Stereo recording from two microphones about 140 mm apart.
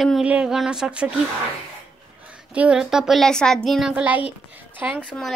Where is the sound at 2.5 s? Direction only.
10° right (ahead or behind).